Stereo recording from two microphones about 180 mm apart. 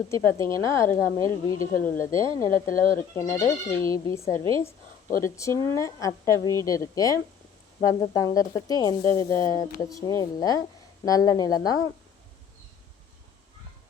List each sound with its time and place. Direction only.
0.1 s a woman's voice: 15° left (ahead or behind)
2.6 s speech: 50° left (ahead or behind)
3.2 s a woman's voice: 15° left (ahead or behind)